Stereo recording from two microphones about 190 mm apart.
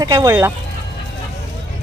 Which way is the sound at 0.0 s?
20° right (ahead or behind).